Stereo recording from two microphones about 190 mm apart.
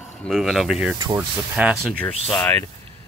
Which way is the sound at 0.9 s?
20° right (ahead or behind).